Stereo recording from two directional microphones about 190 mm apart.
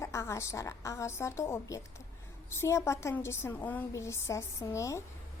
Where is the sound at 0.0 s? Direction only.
15° left (ahead or behind).